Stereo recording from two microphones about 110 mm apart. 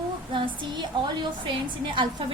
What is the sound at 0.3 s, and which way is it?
Child singing, 45° right (ahead or behind).